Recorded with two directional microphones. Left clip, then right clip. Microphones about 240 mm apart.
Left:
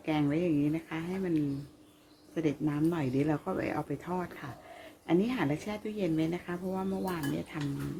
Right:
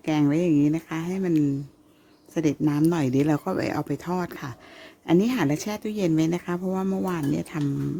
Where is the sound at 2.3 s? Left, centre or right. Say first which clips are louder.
Right 8 dB; right.